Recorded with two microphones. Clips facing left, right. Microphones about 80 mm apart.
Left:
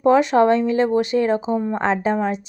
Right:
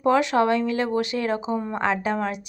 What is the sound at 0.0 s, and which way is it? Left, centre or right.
A woman's voice, left.